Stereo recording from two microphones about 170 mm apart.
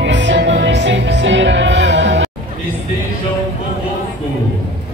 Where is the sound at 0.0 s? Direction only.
90° right.